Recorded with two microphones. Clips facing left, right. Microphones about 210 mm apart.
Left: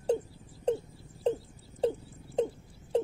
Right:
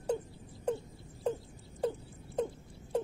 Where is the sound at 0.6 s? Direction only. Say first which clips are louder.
Left 5 dB; 25° left (ahead or behind).